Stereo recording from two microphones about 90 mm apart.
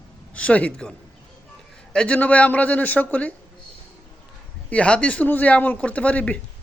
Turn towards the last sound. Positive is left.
turn(degrees=15)  # may be behind; listen again after turning